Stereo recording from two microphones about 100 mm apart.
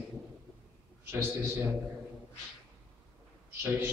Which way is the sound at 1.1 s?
25° right (ahead or behind).